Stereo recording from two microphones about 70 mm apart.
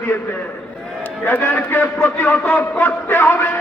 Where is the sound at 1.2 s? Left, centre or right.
Left.